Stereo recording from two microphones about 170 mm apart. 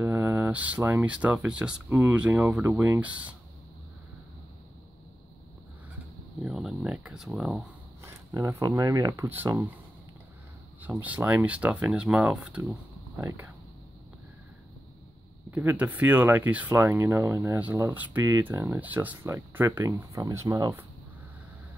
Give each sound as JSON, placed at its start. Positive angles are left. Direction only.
{"t": 0.0, "sound": "speech", "side_deg": -15}
{"t": 6.4, "sound": "speech", "side_deg": -5}
{"t": 8.0, "sound": "speech", "side_deg": -15}
{"t": 10.8, "sound": "speech", "side_deg": -10}
{"t": 15.5, "sound": "speech", "side_deg": -10}